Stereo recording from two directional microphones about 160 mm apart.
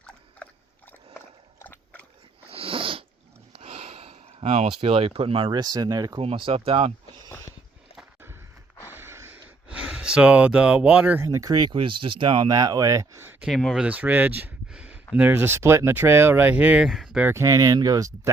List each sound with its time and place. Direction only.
1.6 s dog: 10° left (ahead or behind)
2.5 s cat: 35° right (ahead or behind)
3.5 s a sound: 40° right (ahead or behind)
4.8 s speech: 40° right (ahead or behind); by 6.1 s 25° right (ahead or behind)
6.1 s speech: 35° right (ahead or behind)
7.3 s dog: 15° left (ahead or behind)
8.9 s speech: 15° right (ahead or behind)
13.4 s speech: 5° left (ahead or behind)
13.8 s speech: 10° right (ahead or behind)
17.2 s speech: 20° right (ahead or behind)